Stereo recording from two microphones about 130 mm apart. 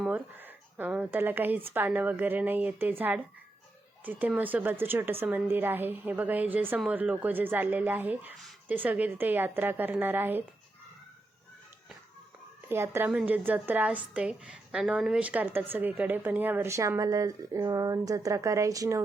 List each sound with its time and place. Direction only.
0.1 s a woman's voice: 15° right (ahead or behind)
4.0 s a woman's voice: 15° right (ahead or behind)
12.6 s a woman's voice: 20° right (ahead or behind)